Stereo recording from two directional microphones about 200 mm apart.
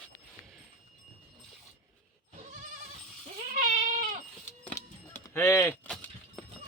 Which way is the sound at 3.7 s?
35° right (ahead or behind).